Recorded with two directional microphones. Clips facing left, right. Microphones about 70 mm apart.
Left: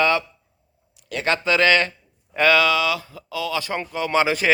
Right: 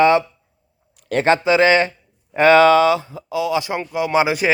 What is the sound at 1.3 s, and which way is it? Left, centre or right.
Speech, centre.